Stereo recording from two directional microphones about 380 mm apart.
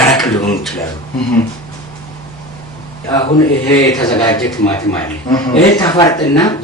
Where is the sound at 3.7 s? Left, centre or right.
Centre.